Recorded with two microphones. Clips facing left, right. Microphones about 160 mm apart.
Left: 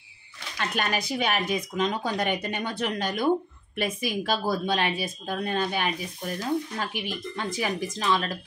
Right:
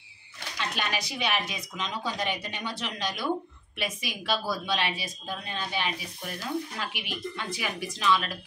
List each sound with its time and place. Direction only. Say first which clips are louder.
0.6 s speech: left 4 dB; 50° left (ahead or behind)